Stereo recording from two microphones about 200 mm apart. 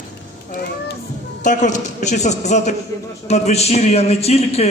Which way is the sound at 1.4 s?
40° left (ahead or behind).